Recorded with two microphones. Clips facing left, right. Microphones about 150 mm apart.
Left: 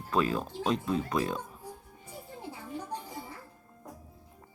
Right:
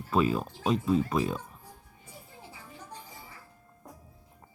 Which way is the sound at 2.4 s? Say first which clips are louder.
Left 10 dB; 60° left (ahead or behind).